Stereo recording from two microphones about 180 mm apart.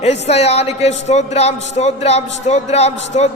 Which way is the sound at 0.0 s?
35° left (ahead or behind).